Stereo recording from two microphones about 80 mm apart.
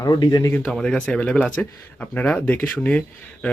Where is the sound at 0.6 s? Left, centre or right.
Centre.